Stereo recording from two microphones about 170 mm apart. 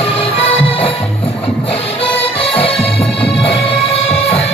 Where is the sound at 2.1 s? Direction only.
35° left (ahead or behind).